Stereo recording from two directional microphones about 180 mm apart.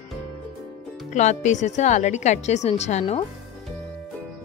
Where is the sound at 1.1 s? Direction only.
40° left (ahead or behind).